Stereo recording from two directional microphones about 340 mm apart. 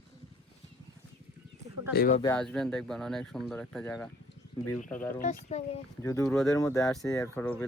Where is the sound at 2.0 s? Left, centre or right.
Left.